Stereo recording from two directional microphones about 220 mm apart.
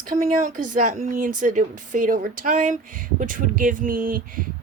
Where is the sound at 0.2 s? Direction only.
30° right (ahead or behind).